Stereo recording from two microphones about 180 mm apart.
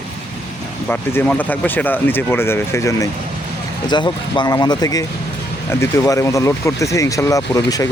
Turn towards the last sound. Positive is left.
turn(degrees=20)  # may be behind; listen again after turning